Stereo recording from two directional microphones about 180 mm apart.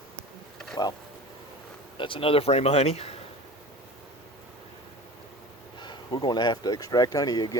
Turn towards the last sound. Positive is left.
turn(degrees=20)  # may be behind; listen again after turning